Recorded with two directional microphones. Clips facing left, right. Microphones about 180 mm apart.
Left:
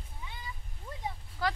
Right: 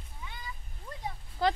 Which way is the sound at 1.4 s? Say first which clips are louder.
Right 5 dB; 25° right (ahead or behind).